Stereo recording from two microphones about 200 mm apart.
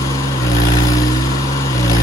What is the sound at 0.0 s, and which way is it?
Vehicle, 15° left (ahead or behind).